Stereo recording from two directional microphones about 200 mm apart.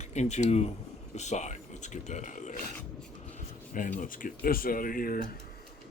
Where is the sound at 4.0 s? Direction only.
40° left (ahead or behind).